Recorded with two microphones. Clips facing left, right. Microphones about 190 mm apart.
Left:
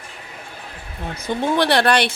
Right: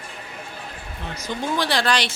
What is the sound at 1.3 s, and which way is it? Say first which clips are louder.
Speech: left 6 dB; 60° left (ahead or behind).